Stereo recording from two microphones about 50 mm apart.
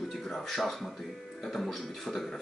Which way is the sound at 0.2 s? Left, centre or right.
Centre.